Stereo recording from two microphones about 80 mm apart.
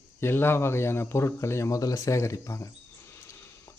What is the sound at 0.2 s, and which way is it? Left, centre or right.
Speech, left.